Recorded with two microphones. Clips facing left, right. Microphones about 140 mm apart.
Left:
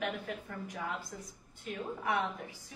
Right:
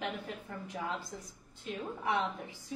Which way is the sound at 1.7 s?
25° right (ahead or behind).